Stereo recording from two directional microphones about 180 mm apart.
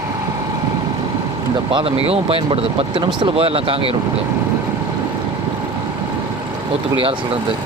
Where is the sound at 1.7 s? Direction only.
30° right (ahead or behind).